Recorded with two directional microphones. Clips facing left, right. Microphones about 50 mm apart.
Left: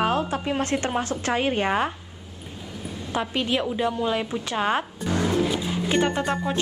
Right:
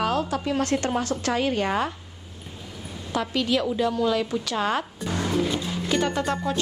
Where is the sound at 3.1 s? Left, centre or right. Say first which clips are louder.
Right 1 dB; left.